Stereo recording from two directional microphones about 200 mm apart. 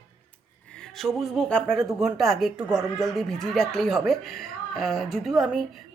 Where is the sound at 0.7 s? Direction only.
5° left (ahead or behind).